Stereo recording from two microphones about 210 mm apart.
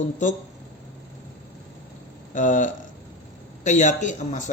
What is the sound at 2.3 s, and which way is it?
Speech, 40° left (ahead or behind).